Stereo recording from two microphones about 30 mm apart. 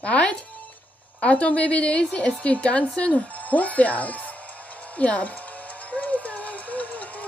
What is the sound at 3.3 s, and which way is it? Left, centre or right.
Music, left.